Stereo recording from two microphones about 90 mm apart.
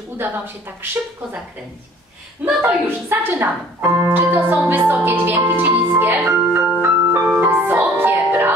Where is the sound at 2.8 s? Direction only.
25° right (ahead or behind).